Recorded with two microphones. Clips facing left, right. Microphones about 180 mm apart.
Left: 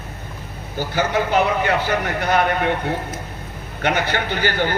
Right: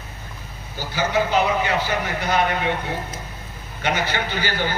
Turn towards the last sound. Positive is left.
turn(degrees=50)  # may be behind; listen again after turning